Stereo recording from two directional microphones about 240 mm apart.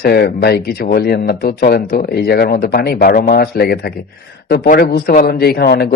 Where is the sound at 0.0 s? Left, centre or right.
Left.